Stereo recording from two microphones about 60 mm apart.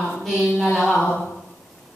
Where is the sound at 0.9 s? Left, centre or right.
Centre.